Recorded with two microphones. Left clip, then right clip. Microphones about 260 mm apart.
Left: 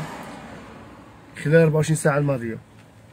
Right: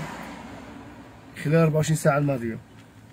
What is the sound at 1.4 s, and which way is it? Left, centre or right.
Speech, centre.